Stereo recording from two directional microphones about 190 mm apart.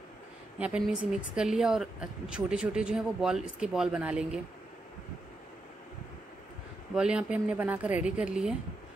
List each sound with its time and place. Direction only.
0.6 s a woman's voice: 5° right (ahead or behind)
7.0 s a woman's voice: 5° right (ahead or behind)